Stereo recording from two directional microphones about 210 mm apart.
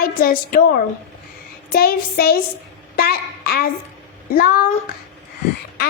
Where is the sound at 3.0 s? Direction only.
45° left (ahead or behind).